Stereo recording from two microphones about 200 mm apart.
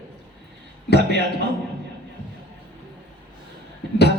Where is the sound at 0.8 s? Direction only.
55° left (ahead or behind).